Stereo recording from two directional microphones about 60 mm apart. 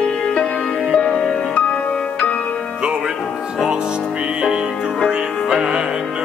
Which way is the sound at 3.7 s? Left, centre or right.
Centre.